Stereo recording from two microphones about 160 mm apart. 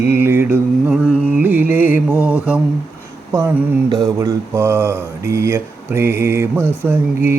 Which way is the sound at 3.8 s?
25° right (ahead or behind).